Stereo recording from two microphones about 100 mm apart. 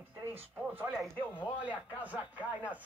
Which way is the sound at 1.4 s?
15° right (ahead or behind).